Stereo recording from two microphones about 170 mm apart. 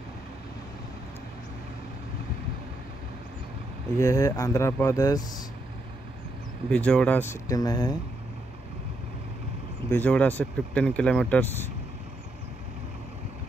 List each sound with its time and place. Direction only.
4.0 s speech: 20° left (ahead or behind)
6.7 s speech: 5° left (ahead or behind)
7.4 s speech: 20° left (ahead or behind)
9.8 s speech: 10° left (ahead or behind)